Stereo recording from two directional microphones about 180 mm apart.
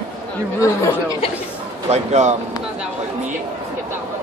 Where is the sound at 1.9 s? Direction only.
40° right (ahead or behind).